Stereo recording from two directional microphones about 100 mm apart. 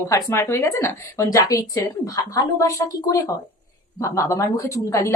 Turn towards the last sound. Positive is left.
turn(degrees=30)  # may be behind; listen again after turning